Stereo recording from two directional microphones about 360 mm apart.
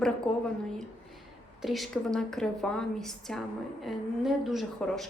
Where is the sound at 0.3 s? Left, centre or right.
Centre.